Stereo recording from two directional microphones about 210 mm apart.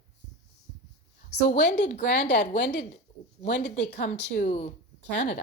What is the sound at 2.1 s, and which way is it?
Speech, 50° left (ahead or behind).